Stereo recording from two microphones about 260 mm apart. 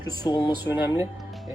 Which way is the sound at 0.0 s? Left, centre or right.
Centre.